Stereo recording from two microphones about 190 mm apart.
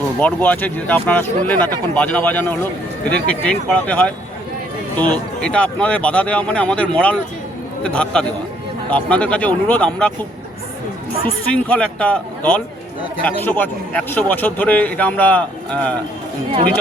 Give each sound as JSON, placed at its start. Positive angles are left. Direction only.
{"t": 0.2, "sound": "a man's voice", "side_deg": 10}
{"t": 11.5, "sound": "a man's voice", "side_deg": 5}